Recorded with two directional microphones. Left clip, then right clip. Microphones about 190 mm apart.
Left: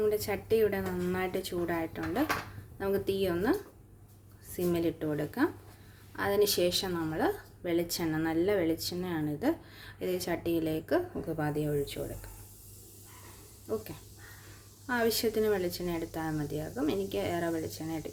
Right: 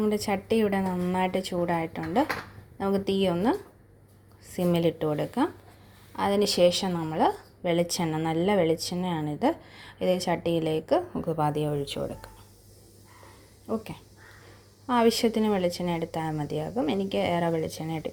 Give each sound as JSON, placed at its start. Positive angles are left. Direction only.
{"t": 0.0, "sound": "a woman's voice", "side_deg": -25}
{"t": 14.8, "sound": "a woman's voice", "side_deg": -20}